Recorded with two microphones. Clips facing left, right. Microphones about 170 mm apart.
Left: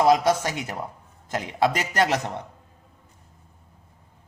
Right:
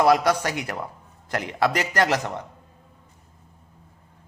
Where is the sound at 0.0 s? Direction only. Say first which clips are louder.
Even; 20° left (ahead or behind).